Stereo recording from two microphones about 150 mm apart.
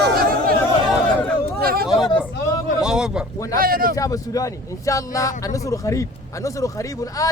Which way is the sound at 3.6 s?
75° right (ahead or behind).